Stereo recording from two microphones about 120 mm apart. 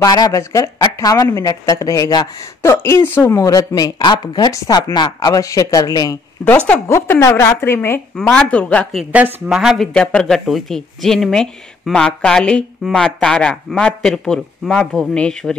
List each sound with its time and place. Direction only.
0.0 s a woman's voice: 30° left (ahead or behind)
8.2 s speech: 10° left (ahead or behind)
9.1 s speech: 10° right (ahead or behind); by 15.5 s 5° left (ahead or behind)